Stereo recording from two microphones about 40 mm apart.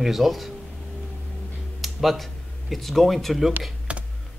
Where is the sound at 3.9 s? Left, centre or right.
Right.